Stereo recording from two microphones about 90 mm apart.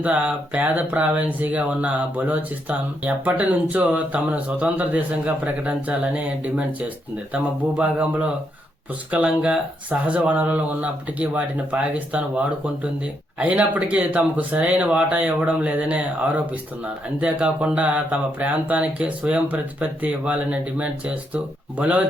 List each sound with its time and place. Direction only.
0.0 s speech: 15° right (ahead or behind)
13.4 s speech: 15° right (ahead or behind)